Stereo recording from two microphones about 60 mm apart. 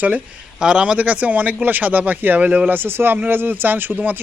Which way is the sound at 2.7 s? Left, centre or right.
Right.